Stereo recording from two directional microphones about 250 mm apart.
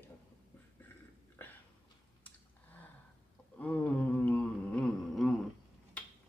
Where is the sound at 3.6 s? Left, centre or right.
Centre.